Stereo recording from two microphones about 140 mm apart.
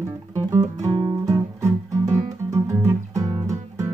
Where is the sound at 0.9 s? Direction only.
40° right (ahead or behind).